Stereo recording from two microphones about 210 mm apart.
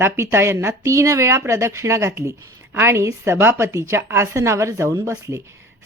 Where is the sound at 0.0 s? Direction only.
10° right (ahead or behind).